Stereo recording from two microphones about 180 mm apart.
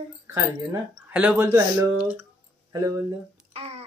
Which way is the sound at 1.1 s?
10° right (ahead or behind).